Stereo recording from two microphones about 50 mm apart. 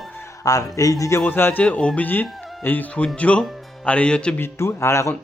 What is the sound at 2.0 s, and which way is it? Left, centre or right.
Speech, left.